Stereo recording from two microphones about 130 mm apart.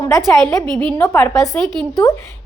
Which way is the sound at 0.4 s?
10° left (ahead or behind).